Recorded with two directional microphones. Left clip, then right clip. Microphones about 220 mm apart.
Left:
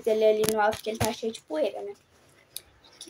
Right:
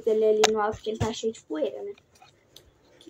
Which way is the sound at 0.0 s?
25° left (ahead or behind).